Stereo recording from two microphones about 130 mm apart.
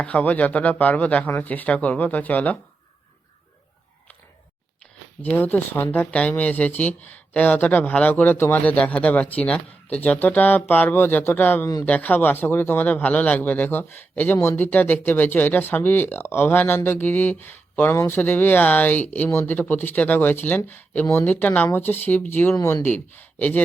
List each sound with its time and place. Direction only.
0.0 s a man's voice: 10° left (ahead or behind)
5.2 s a man's voice: 15° left (ahead or behind)